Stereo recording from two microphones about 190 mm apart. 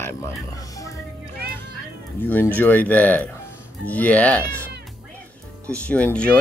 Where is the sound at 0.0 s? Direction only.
15° left (ahead or behind).